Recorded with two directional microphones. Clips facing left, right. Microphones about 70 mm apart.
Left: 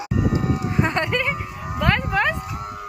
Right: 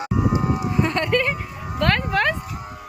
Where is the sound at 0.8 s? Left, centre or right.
Left.